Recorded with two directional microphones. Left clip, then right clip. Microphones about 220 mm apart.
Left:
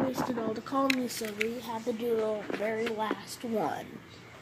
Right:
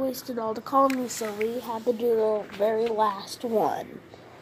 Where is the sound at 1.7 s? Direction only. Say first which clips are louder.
Right 7 dB; 15° right (ahead or behind).